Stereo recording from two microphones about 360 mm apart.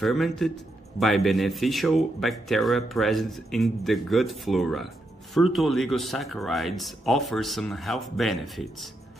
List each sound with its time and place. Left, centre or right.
0.0 s a man's voice: centre